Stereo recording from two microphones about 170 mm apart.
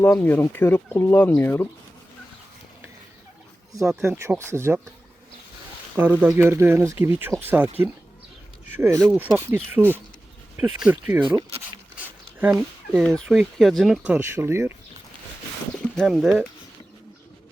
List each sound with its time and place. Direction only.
0.0 s speech: 10° left (ahead or behind)
4.0 s speech: 10° right (ahead or behind)
6.0 s speech: 10° right (ahead or behind)
8.7 s speech: 15° right (ahead or behind)
11.3 s a sound: 25° right (ahead or behind)
11.9 s a sound: 10° right (ahead or behind)
12.5 s speech: centre (ahead or behind); by 14.8 s 15° right (ahead or behind)
16.0 s speech: centre (ahead or behind)